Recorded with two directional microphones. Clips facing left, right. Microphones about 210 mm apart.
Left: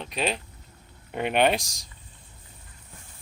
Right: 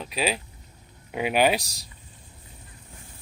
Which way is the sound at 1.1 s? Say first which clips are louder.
Right 1 dB; 5° right (ahead or behind).